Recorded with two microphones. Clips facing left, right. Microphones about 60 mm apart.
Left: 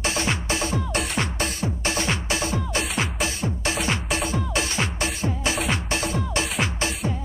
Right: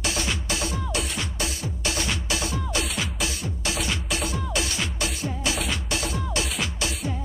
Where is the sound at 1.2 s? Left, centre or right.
Left.